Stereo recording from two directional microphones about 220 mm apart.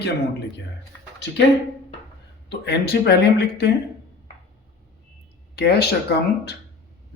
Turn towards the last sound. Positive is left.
turn(degrees=45)  # may be behind; listen again after turning